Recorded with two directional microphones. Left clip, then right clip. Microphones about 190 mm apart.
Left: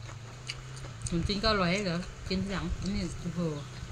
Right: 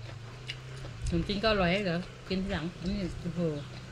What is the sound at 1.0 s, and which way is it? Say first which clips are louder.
Speech: right 1 dB; 15° left (ahead or behind).